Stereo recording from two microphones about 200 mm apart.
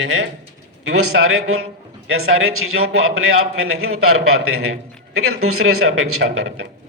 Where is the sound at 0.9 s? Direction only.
90° right.